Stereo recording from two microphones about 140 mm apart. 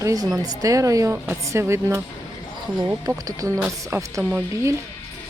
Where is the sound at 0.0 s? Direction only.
25° right (ahead or behind).